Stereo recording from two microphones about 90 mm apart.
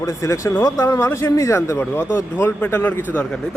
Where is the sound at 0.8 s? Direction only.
30° left (ahead or behind).